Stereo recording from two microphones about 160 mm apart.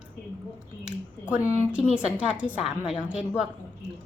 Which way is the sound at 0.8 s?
10° right (ahead or behind).